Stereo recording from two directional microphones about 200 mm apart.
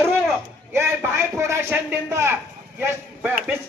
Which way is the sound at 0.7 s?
15° right (ahead or behind).